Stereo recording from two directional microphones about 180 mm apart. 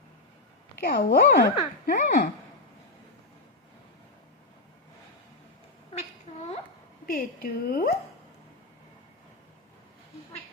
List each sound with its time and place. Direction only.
0.8 s speech: 55° left (ahead or behind)
5.9 s a sound: 35° left (ahead or behind)
7.1 s speech: 55° left (ahead or behind)